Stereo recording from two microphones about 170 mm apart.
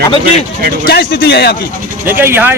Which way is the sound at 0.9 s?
70° left (ahead or behind).